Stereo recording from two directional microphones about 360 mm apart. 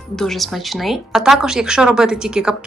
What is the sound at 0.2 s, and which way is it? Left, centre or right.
Speech, centre.